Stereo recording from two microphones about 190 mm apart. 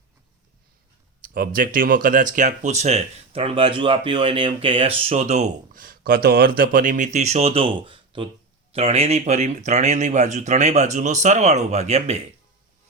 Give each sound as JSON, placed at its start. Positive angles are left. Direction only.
{"t": 1.2, "sound": "speech", "side_deg": -45}